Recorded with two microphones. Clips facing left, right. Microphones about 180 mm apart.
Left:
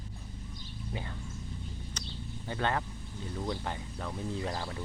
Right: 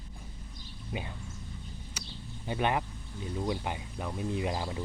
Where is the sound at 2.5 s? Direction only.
15° right (ahead or behind).